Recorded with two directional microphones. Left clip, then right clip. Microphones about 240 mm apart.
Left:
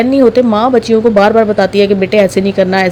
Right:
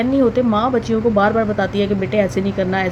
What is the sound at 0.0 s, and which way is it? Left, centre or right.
Speech, left.